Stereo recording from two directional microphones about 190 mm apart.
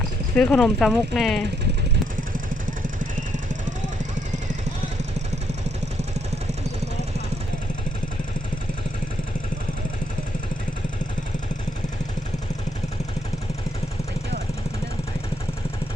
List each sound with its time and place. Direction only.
0.3 s speech: 5° left (ahead or behind)
2.6 s vehicle: 45° right (ahead or behind)